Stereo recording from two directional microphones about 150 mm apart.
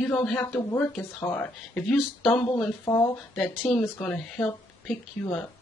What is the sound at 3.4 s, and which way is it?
Speech, centre (ahead or behind).